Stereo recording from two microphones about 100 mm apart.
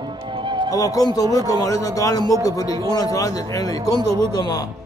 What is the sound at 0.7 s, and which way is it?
A man's voice, 35° left (ahead or behind).